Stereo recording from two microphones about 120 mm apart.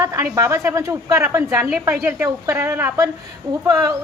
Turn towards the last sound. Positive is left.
turn(degrees=-25)  # may be behind; listen again after turning